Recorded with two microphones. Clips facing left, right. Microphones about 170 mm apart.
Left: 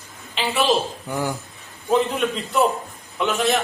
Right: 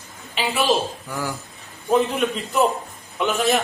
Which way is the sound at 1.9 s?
Centre (ahead or behind).